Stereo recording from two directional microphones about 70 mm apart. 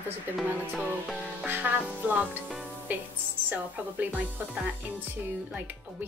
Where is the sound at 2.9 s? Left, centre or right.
Right.